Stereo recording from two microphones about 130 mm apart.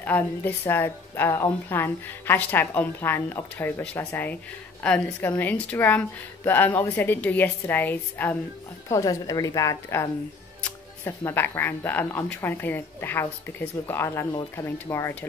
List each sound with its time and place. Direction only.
0.0 s a woman's voice: 15° left (ahead or behind)
8.8 s a woman's voice: 25° left (ahead or behind)